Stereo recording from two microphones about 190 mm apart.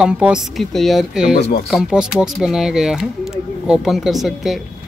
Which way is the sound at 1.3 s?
55° left (ahead or behind).